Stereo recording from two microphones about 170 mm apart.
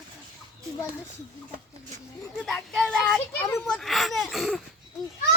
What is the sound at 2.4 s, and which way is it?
Speech, 5° left (ahead or behind).